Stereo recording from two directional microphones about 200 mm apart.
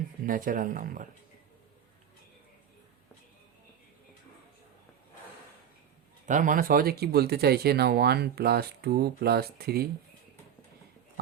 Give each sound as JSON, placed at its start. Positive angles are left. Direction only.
{"t": 0.3, "sound": "speech", "side_deg": -40}
{"t": 6.2, "sound": "speech", "side_deg": -40}